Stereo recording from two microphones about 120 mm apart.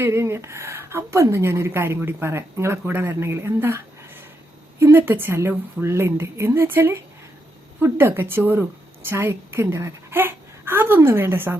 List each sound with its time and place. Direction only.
0.0 s a woman's voice: 20° right (ahead or behind)